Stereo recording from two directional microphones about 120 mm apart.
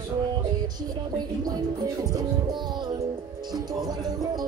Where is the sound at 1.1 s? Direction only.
35° right (ahead or behind).